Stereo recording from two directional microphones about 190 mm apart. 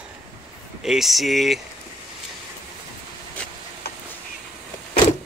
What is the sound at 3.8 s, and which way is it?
Frying, 55° left (ahead or behind).